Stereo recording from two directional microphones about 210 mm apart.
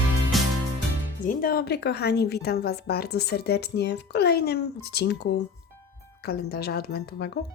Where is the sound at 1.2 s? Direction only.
40° left (ahead or behind).